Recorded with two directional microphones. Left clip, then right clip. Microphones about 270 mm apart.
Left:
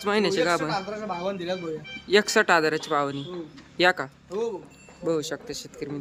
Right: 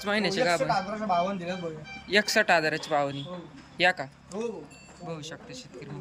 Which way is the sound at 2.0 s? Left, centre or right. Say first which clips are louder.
Left 3 dB; centre.